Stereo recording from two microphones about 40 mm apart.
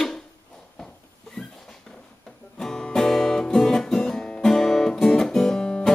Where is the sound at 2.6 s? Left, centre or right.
Centre.